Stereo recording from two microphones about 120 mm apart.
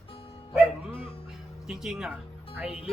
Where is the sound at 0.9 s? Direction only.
50° left (ahead or behind).